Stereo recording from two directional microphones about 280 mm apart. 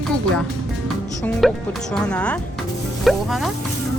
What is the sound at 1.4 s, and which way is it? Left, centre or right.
Speech, centre.